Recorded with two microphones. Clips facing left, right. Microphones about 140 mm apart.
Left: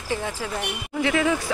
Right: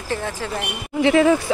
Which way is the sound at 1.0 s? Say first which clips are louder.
Right 7 dB; 35° right (ahead or behind).